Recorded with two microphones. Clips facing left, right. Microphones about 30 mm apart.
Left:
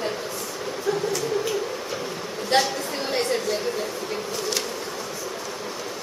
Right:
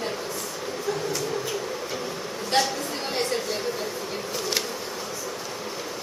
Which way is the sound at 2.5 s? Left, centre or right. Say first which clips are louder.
Left 2 dB; centre.